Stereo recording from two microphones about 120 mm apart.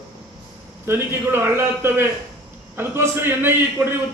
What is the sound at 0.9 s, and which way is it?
A man's voice, 20° right (ahead or behind).